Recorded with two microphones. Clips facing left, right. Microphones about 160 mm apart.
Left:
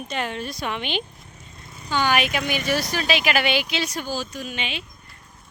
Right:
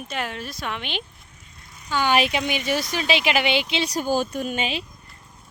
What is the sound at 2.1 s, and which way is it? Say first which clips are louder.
Speech: right 1 dB; 25° right (ahead or behind).